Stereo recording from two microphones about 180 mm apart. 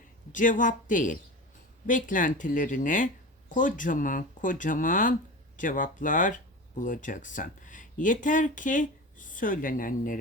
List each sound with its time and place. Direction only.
0.3 s speech: 45° left (ahead or behind)